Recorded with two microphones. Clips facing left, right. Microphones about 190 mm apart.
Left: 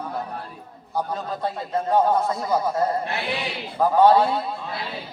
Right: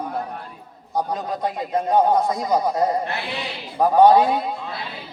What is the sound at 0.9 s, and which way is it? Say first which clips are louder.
A man's voice: right 3 dB; 15° right (ahead or behind).